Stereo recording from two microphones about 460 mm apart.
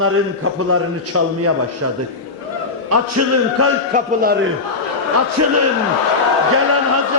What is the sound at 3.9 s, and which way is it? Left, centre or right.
Speech, centre.